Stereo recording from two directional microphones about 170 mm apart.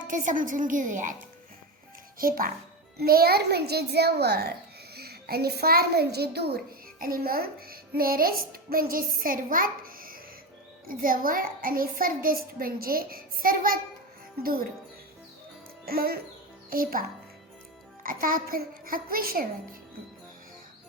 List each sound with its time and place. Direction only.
0.0 s a woman's voice: 50° right (ahead or behind)
2.1 s a child's voice: 55° right (ahead or behind)
7.0 s a child's voice: 60° right (ahead or behind)
15.9 s a child's voice: 60° right (ahead or behind)